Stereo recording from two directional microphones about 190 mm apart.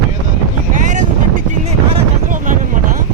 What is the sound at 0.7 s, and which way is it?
Boat, 40° right (ahead or behind).